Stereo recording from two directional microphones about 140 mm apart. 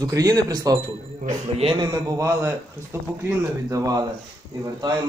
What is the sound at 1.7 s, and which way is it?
Speech, 30° right (ahead or behind).